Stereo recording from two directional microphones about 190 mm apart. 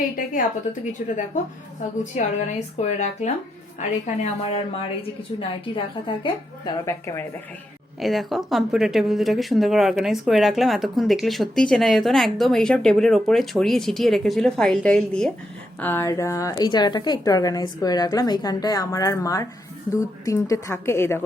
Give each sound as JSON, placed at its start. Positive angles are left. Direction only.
{"t": 2.1, "sound": "a woman's voice", "side_deg": 35}
{"t": 8.0, "sound": "a woman's voice", "side_deg": 0}